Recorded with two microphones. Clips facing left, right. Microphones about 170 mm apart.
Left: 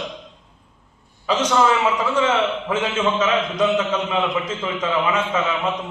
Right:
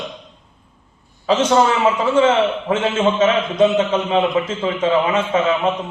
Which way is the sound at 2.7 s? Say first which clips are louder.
Right 4 dB; 30° right (ahead or behind).